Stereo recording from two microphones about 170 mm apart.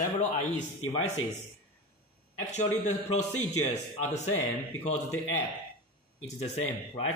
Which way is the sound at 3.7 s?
45° left (ahead or behind).